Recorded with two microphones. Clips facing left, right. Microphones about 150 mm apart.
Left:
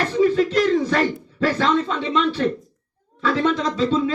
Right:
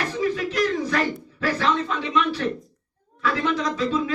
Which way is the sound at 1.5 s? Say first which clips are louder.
Left 1 dB; 30° left (ahead or behind).